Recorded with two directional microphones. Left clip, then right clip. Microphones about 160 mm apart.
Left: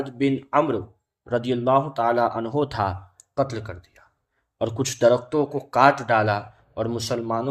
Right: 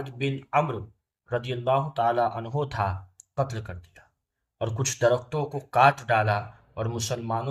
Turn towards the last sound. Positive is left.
turn(degrees=35)  # may be behind; listen again after turning